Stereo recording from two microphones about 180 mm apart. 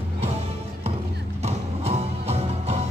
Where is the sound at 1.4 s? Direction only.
35° right (ahead or behind).